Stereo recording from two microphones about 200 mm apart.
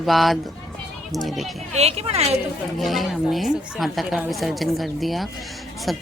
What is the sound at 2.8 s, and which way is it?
A child's voice, centre (ahead or behind).